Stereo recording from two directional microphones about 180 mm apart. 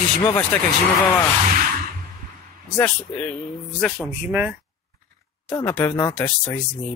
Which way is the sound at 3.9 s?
10° right (ahead or behind).